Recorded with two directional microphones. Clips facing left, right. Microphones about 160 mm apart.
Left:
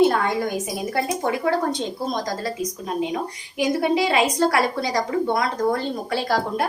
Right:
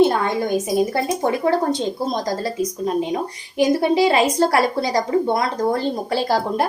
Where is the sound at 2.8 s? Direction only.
35° right (ahead or behind).